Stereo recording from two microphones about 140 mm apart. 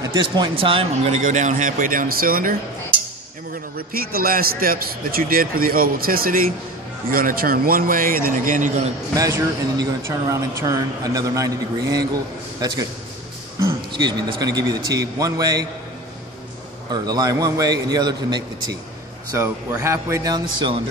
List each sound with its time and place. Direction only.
0.0 s speech: 30° right (ahead or behind)
1.2 s speech: 65° right (ahead or behind); by 2.5 s 90° right
3.7 s a man's voice: 90° right; by 8.7 s 70° right (ahead or behind)
9.1 s a man's voice: 25° right (ahead or behind)
14.4 s speech: 25° right (ahead or behind)
16.9 s speech: 30° right (ahead or behind)